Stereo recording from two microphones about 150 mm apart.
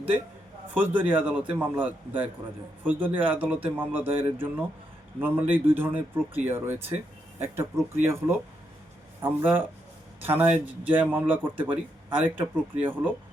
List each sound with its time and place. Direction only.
0.7 s a man's voice: 10° right (ahead or behind)
9.2 s a man's voice: 15° right (ahead or behind)